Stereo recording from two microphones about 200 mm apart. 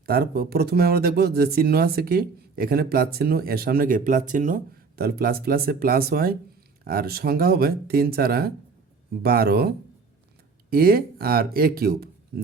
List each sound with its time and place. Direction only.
0.0 s speech: 50° right (ahead or behind)